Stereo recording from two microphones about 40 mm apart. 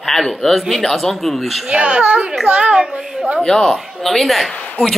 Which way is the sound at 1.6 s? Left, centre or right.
Right.